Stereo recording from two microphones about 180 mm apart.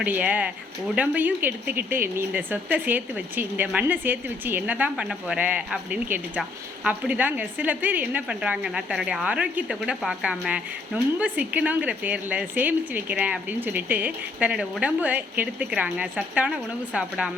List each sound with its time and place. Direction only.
0.0 s a woman's voice: 10° right (ahead or behind)